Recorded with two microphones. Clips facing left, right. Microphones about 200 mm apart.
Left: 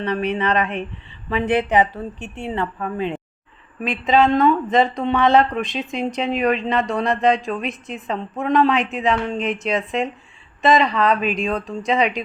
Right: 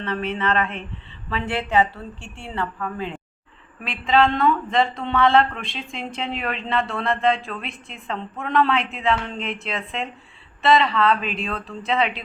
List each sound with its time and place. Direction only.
0.0 s a woman's voice: 15° left (ahead or behind)